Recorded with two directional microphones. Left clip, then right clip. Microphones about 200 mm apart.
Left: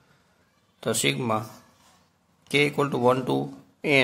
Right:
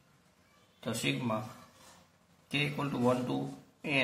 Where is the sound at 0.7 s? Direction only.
50° left (ahead or behind).